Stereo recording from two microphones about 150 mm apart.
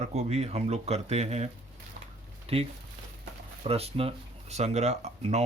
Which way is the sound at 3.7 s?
40° right (ahead or behind).